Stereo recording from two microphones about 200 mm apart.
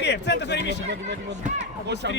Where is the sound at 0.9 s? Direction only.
60° right (ahead or behind).